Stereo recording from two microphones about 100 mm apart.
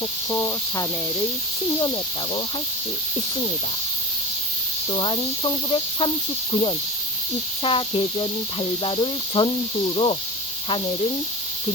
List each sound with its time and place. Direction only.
0.3 s speech: 25° left (ahead or behind)
4.9 s speech: 55° left (ahead or behind)